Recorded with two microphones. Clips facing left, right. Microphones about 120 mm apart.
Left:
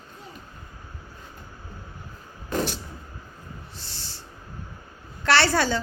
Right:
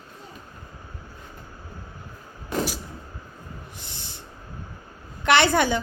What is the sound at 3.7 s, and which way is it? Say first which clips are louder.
Owl: right 1 dB; 20° right (ahead or behind).